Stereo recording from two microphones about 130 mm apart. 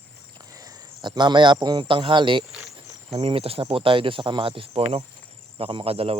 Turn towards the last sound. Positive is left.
turn(degrees=-50)  # may be behind; listen again after turning